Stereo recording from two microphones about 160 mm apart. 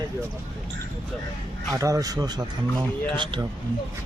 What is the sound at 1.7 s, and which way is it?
Speech, 20° right (ahead or behind).